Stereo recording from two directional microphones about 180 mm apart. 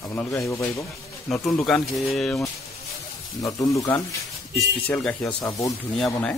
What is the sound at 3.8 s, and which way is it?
Speech, 20° left (ahead or behind).